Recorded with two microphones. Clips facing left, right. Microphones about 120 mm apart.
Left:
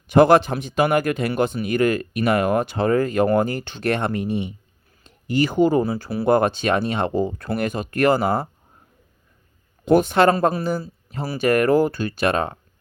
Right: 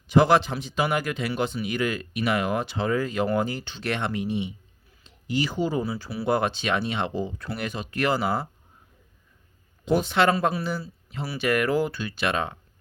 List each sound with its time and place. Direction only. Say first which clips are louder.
0.1 s speech: left 5 dB; 50° left (ahead or behind)
9.8 s speech: left 6 dB; 50° left (ahead or behind)